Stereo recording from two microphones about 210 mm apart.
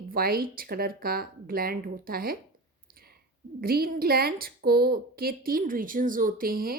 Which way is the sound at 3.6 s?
45° right (ahead or behind).